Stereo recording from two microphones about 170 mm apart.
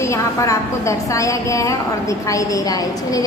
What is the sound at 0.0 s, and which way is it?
A woman's voice, 20° left (ahead or behind).